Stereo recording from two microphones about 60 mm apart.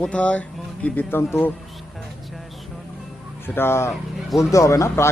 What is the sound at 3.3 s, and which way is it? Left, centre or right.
Speech, left.